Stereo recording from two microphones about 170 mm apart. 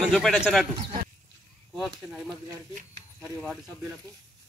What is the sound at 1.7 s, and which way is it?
Speech, centre (ahead or behind).